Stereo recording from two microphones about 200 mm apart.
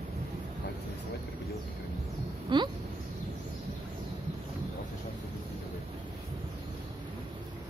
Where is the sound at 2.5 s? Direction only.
25° right (ahead or behind).